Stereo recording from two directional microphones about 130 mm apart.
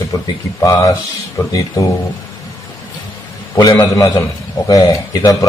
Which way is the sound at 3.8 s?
25° left (ahead or behind).